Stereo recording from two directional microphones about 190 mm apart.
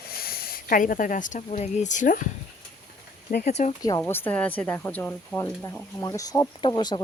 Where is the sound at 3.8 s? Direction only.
15° left (ahead or behind).